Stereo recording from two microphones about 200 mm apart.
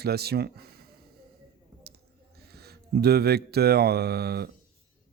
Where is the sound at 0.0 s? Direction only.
50° right (ahead or behind).